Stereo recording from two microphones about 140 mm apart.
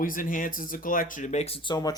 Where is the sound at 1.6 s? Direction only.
30° left (ahead or behind).